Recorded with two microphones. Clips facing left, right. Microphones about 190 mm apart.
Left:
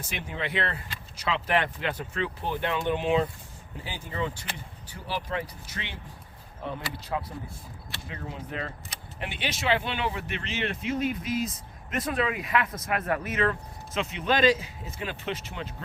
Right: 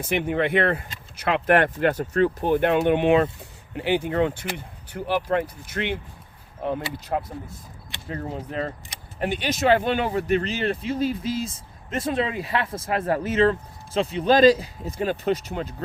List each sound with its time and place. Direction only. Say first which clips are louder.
0.0 s speech: right 11 dB; 55° right (ahead or behind); by 15.7 s 40° right (ahead or behind)